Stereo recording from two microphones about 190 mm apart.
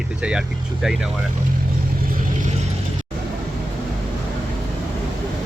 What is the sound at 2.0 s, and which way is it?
Vehicle, 50° right (ahead or behind).